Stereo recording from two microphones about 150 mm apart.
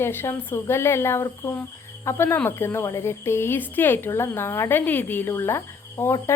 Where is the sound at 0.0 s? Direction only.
15° left (ahead or behind).